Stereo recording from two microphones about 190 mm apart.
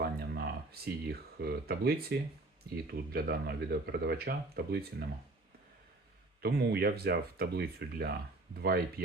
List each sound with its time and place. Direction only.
0.0 s speech: 55° right (ahead or behind)
6.4 s speech: 60° right (ahead or behind)